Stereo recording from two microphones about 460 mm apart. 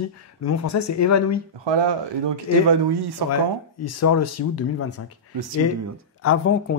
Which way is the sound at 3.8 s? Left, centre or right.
Left.